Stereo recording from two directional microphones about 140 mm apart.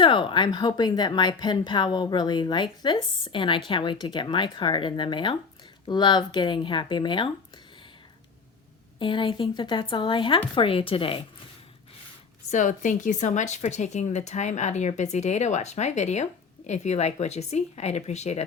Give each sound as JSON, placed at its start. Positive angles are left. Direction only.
{"t": 0.0, "sound": "a woman's voice", "side_deg": 35}
{"t": 9.0, "sound": "a woman's voice", "side_deg": 35}
{"t": 12.5, "sound": "speech", "side_deg": 65}